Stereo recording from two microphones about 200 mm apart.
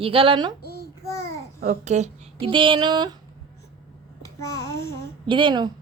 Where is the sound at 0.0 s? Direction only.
25° right (ahead or behind).